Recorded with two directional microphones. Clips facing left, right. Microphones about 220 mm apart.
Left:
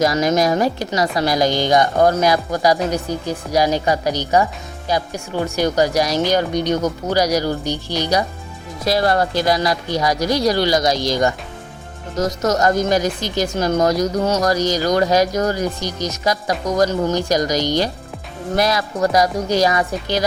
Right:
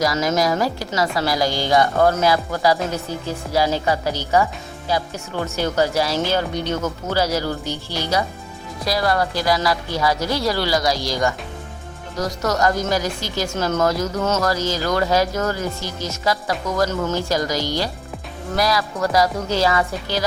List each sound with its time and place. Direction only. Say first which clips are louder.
0.0 s speech: left 3 dB; 20° left (ahead or behind)